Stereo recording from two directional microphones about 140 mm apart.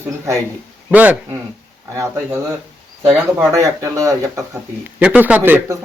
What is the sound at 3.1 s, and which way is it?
Speech, 5° right (ahead or behind).